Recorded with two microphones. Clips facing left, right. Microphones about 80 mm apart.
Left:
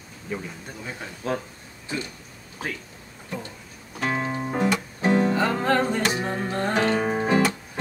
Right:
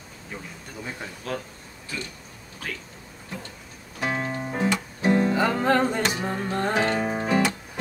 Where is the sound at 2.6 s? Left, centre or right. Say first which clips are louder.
Left 3 dB; left.